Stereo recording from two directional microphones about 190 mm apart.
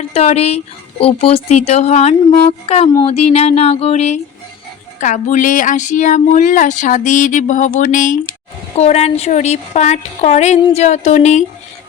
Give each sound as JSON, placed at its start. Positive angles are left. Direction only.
{"t": 0.1, "sound": "speech", "side_deg": 35}